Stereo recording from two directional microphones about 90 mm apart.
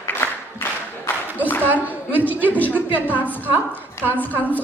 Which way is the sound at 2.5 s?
20° left (ahead or behind).